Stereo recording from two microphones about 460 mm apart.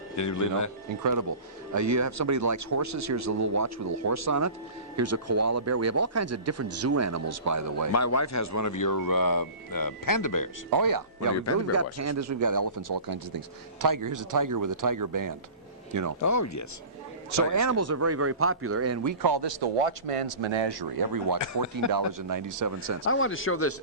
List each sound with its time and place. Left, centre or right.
0.2 s speech: left
1.7 s speech: right
7.9 s speech: left
10.7 s speech: right
16.2 s speech: left
17.3 s speech: right
19.2 s speech: right
21.6 s speech: left
21.9 s speech: right
23.0 s speech: left